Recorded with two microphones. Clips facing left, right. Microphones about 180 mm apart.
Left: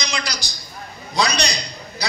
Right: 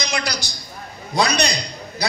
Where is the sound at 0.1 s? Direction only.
60° right (ahead or behind).